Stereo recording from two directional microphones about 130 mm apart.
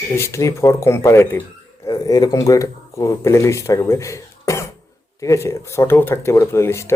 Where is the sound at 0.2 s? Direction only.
20° left (ahead or behind).